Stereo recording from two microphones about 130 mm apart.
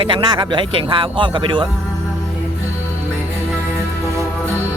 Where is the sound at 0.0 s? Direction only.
40° right (ahead or behind).